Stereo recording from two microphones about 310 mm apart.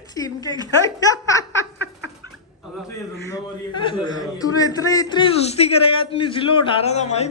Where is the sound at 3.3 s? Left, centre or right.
Centre.